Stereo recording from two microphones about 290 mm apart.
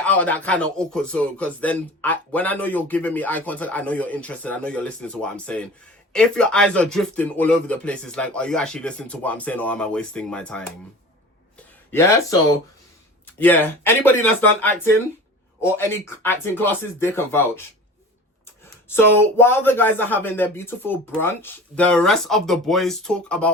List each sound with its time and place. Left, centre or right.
0.0 s speech: centre
11.9 s speech: centre
18.9 s speech: centre